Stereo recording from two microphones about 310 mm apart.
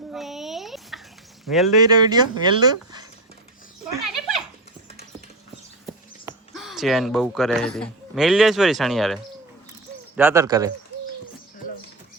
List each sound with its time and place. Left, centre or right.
0.1 s a sound: centre
1.5 s speech: centre
1.8 s speech: centre
2.6 s a sound: centre
3.9 s dog: centre
5.8 s speech: centre